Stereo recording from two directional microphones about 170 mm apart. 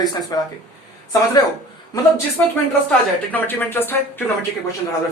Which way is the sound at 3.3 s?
10° left (ahead or behind).